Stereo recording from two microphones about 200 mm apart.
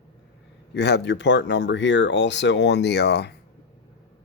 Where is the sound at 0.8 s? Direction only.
55° left (ahead or behind).